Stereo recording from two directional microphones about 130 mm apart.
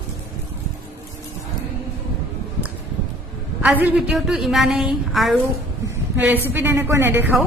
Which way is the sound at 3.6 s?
15° right (ahead or behind).